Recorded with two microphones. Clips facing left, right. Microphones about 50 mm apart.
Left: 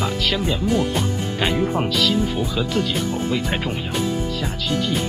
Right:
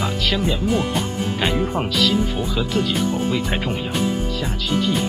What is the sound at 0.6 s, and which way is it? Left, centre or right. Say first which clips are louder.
Speech: even; centre.